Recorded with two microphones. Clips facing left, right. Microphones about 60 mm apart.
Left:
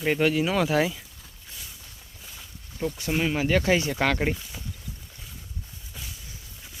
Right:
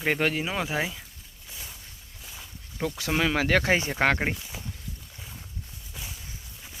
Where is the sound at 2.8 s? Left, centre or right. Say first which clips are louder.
Even; right.